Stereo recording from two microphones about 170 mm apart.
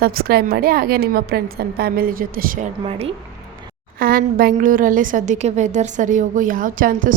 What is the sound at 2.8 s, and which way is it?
Speech, 35° right (ahead or behind).